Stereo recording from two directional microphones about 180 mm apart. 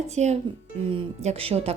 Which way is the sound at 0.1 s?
40° right (ahead or behind).